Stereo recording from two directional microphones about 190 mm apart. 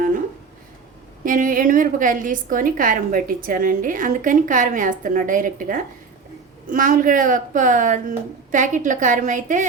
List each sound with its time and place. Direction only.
1.2 s a woman's voice: 45° right (ahead or behind)